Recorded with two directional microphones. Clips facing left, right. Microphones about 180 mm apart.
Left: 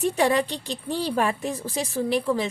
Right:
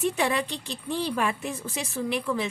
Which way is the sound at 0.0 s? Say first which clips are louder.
Left 4 dB; 35° left (ahead or behind).